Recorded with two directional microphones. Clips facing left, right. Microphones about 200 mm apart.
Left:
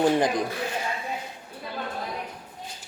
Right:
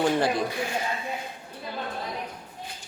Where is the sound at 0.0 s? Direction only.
15° left (ahead or behind).